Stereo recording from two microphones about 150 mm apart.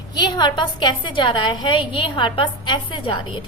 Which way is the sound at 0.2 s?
30° left (ahead or behind).